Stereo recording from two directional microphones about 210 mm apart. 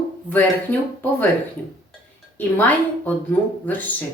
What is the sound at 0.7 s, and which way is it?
Speech, 10° left (ahead or behind).